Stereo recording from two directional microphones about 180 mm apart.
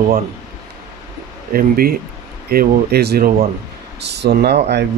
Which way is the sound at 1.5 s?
55° right (ahead or behind).